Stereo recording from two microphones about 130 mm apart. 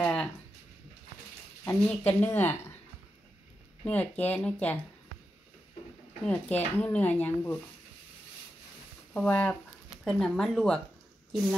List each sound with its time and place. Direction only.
0.0 s a sound: 5° left (ahead or behind)
1.9 s speech: 15° left (ahead or behind)
3.8 s speech: 10° left (ahead or behind)
6.2 s speech: 10° left (ahead or behind)
9.1 s speech: 10° left (ahead or behind)